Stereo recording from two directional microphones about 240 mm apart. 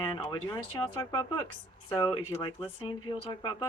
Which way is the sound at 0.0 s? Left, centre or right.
Centre.